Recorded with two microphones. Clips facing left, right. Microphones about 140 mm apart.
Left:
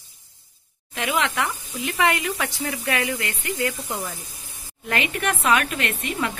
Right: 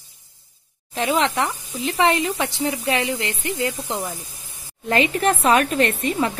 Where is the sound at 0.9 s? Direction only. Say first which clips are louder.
Right 4 dB; 35° right (ahead or behind).